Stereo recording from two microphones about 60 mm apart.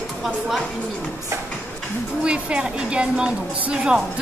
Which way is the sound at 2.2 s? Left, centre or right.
Centre.